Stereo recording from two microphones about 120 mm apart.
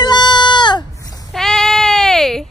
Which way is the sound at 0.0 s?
40° left (ahead or behind).